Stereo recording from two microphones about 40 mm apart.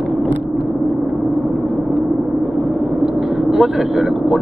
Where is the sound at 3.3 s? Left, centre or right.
Centre.